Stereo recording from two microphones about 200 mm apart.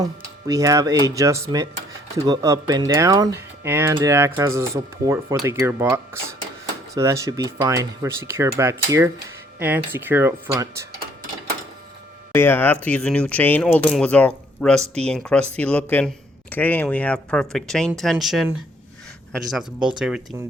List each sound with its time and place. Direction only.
0.4 s speech: 15° right (ahead or behind)
12.3 s speech: 10° left (ahead or behind)